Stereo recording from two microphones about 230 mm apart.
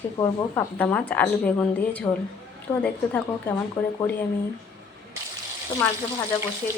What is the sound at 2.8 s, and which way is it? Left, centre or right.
Speech, centre.